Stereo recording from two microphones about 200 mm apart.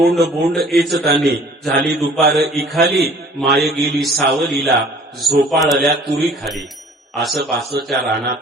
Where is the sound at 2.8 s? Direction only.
50° right (ahead or behind).